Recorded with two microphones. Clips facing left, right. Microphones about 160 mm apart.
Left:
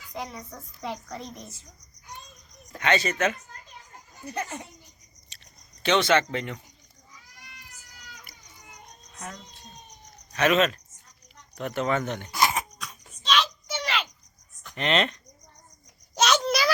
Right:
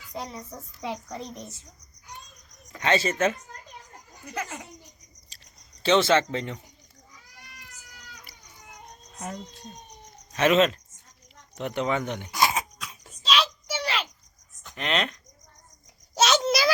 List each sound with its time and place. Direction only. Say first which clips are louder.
0.1 s a child's voice: even; centre (ahead or behind)
1.1 s a child's voice: right 2 dB; 5° left (ahead or behind)
2.8 s speech: right 1 dB; 30° right (ahead or behind)
5.8 s speech: right 1 dB; 30° right (ahead or behind)
9.1 s speech: right 4 dB; 30° right (ahead or behind); by 12.5 s 15° right (ahead or behind)
12.9 s a sound: even; centre (ahead or behind)
14.6 s speech: left 3 dB; centre (ahead or behind)
16.1 s a sound: right 1 dB; 5° right (ahead or behind)